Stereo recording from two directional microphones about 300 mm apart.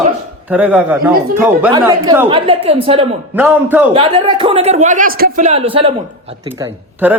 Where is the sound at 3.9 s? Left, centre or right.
Centre.